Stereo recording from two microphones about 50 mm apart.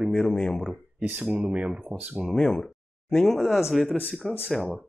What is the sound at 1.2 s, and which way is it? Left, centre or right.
Speech, centre.